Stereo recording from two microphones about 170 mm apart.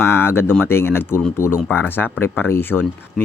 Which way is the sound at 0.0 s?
15° left (ahead or behind).